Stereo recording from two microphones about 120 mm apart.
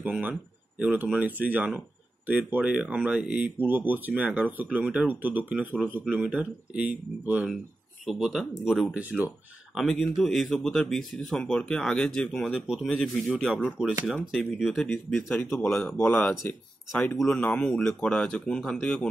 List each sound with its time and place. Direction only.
0.0 s speech: 10° right (ahead or behind)
8.0 s speech: centre (ahead or behind)
8.9 s speech: 10° right (ahead or behind)
9.8 s speech: centre (ahead or behind)
15.1 s speech: 15° left (ahead or behind)